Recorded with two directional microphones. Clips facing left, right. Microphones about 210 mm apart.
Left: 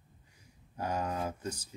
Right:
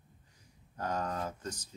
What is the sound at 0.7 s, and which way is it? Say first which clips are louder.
Speech: left 1 dB; 10° left (ahead or behind).